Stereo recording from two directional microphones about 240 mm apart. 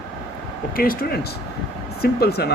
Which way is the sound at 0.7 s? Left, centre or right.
Left.